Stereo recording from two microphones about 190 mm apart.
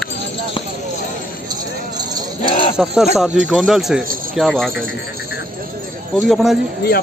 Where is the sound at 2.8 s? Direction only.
Centre (ahead or behind).